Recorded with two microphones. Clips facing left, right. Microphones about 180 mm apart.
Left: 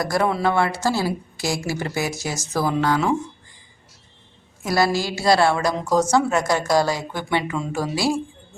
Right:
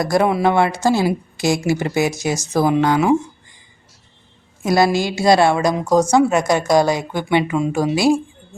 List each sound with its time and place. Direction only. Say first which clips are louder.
0.0 s a woman's voice: right 5 dB; 20° right (ahead or behind)
4.6 s a woman's voice: right 5 dB; 20° right (ahead or behind)